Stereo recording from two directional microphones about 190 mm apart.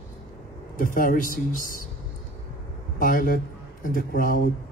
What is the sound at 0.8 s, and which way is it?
Speech, 45° left (ahead or behind).